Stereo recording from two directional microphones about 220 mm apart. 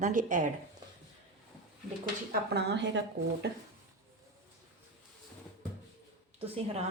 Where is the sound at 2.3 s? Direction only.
50° right (ahead or behind).